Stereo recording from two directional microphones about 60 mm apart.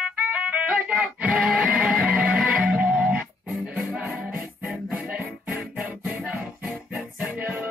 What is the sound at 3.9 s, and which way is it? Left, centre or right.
Music, centre.